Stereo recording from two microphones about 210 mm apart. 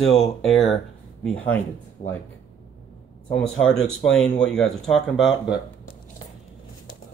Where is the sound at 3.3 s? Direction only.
5° left (ahead or behind).